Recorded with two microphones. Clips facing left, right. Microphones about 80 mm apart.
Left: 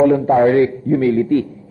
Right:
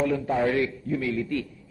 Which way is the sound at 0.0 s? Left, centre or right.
Left.